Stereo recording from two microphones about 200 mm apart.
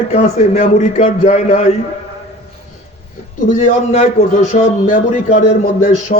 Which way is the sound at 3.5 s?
35° left (ahead or behind).